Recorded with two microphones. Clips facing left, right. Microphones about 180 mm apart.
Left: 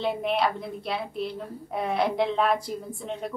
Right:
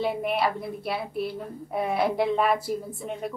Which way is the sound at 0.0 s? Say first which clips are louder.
Even; 5° right (ahead or behind).